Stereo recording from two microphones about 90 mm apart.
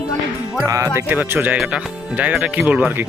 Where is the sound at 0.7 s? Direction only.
35° right (ahead or behind).